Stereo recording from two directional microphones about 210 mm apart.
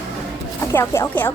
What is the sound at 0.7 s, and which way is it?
Speech, 10° left (ahead or behind).